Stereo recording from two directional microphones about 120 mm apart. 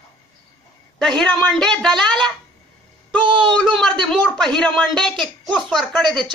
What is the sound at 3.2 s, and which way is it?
Speech, 40° right (ahead or behind).